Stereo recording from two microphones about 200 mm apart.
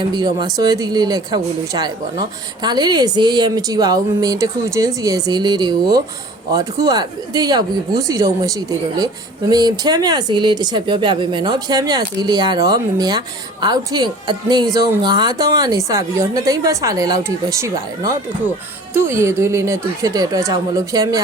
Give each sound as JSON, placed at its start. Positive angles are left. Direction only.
{"t": 0.0, "sound": "speech", "side_deg": -20}